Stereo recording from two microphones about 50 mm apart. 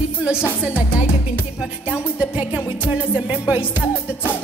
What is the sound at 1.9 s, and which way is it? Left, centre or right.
Music, right.